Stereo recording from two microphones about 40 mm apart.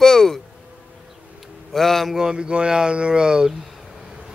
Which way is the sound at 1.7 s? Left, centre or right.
Centre.